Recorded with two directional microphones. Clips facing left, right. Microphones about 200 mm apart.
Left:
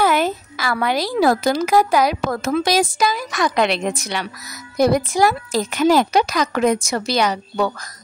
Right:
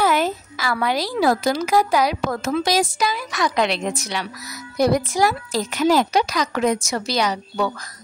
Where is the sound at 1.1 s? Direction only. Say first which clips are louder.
Left 3 dB; 50° left (ahead or behind).